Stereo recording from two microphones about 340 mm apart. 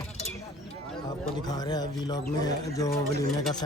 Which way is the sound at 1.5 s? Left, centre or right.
Centre.